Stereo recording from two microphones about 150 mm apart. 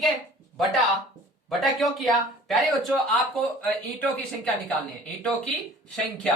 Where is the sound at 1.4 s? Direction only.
Centre (ahead or behind).